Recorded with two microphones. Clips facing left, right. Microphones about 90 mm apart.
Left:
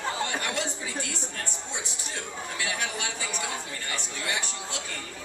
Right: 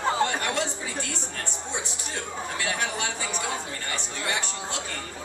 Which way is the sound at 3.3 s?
30° right (ahead or behind).